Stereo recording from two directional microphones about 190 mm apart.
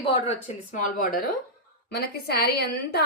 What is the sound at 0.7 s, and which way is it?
Speech, 45° left (ahead or behind).